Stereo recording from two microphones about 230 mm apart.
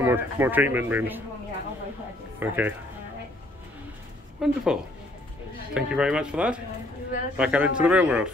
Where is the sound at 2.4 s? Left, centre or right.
Centre.